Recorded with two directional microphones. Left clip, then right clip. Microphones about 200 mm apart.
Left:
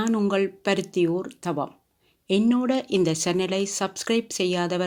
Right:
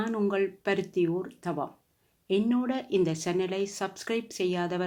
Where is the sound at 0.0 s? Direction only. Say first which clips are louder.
Left 4 dB; 35° left (ahead or behind).